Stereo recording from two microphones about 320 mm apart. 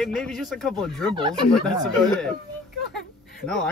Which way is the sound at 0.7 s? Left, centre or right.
Centre.